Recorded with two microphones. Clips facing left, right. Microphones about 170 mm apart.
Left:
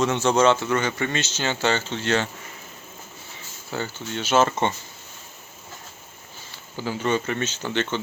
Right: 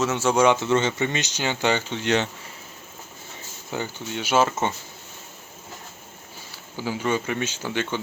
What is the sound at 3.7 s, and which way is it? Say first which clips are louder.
Speech: even; 15° right (ahead or behind).